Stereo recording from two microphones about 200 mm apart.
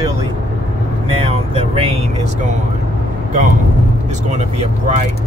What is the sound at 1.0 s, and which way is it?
Speech, 30° right (ahead or behind).